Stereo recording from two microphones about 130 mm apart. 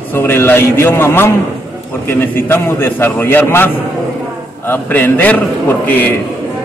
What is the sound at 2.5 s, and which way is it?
A man's voice, 15° left (ahead or behind).